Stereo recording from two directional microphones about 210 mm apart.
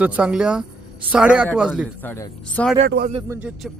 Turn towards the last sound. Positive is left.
turn(degrees=-5)  # may be behind; listen again after turning